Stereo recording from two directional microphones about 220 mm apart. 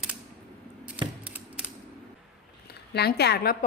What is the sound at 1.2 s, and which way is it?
Mechanisms, 5° right (ahead or behind).